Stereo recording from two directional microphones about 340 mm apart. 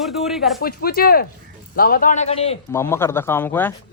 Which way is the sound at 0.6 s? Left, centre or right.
Left.